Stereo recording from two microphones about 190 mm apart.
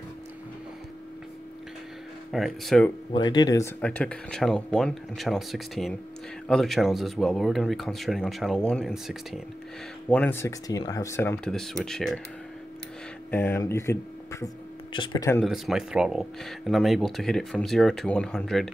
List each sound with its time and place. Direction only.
2.3 s speech: centre (ahead or behind)
3.1 s speech: 25° left (ahead or behind)
3.8 s speech: 5° left (ahead or behind)
13.3 s speech: 10° left (ahead or behind)
14.9 s speech: 25° left (ahead or behind)
15.4 s speech: centre (ahead or behind)